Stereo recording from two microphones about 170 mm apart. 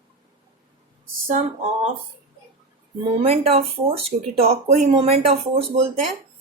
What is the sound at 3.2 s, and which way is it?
Speech, 35° right (ahead or behind).